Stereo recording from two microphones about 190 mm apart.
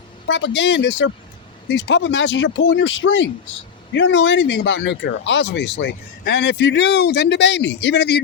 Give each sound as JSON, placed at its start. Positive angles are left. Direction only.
{"t": 0.3, "sound": "speech", "side_deg": 75}